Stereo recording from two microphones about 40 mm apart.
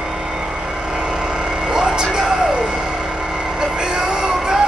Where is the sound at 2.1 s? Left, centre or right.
Centre.